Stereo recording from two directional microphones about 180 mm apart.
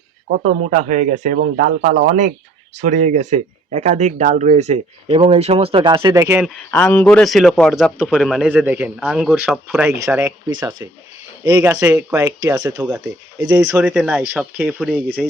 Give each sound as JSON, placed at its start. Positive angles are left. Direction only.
{"t": 0.3, "sound": "speech", "side_deg": -50}
{"t": 6.7, "sound": "a man's voice", "side_deg": 10}
{"t": 13.7, "sound": "a man's voice", "side_deg": -5}